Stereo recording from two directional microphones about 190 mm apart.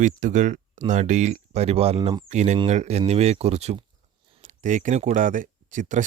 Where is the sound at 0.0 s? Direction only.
40° right (ahead or behind).